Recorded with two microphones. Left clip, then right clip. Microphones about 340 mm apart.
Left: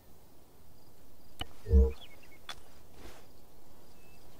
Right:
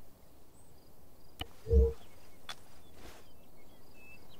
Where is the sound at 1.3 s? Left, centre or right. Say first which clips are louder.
Right 2 dB; centre.